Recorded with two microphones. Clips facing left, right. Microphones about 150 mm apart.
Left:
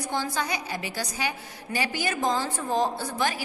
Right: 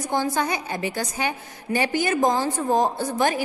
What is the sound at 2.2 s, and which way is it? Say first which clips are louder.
Speech: right 6 dB; 50° right (ahead or behind).